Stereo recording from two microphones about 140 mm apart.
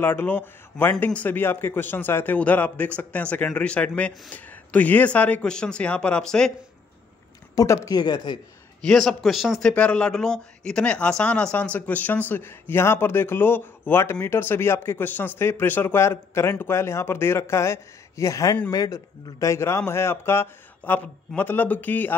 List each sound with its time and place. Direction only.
0.0 s a man's voice: 15° left (ahead or behind)
7.5 s speech: 20° left (ahead or behind)
8.8 s a man's voice: centre (ahead or behind)